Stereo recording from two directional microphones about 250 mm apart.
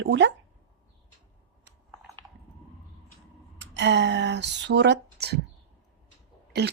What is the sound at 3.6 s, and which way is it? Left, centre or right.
Speech, right.